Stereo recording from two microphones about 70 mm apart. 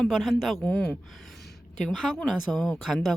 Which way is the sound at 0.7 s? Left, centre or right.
Left.